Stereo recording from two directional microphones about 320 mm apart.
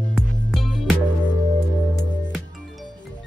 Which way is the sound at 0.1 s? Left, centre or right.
Centre.